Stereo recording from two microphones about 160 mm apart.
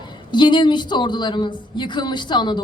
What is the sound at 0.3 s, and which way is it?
Speech, 30° left (ahead or behind).